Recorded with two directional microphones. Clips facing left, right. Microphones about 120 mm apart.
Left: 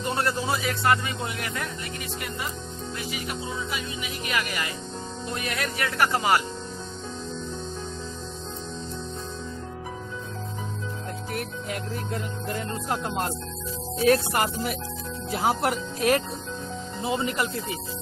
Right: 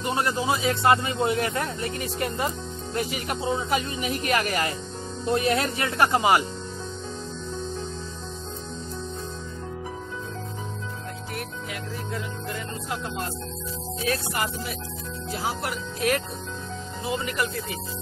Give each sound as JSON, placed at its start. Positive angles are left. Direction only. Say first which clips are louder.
{"t": 0.0, "sound": "a man's voice", "louder": "right 1 dB", "side_deg": -15}
{"t": 5.3, "sound": "speech", "louder": "right 8 dB", "side_deg": -30}
{"t": 12.5, "sound": "speech", "louder": "left 6 dB", "side_deg": 45}
{"t": 14.3, "sound": "speech", "louder": "left 3 dB", "side_deg": 55}
{"t": 17.1, "sound": "speech", "louder": "left 1 dB", "side_deg": 30}